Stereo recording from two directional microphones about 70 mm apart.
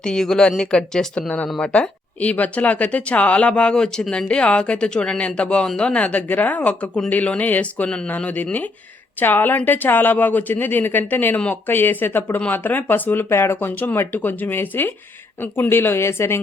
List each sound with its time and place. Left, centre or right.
0.0 s speech: centre; by 16.4 s left